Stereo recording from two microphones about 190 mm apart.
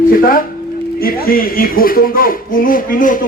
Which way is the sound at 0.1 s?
50° left (ahead or behind).